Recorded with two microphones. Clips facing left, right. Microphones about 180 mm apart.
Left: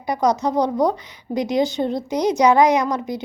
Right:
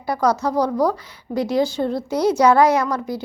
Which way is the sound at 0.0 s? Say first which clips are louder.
Even; 20° left (ahead or behind).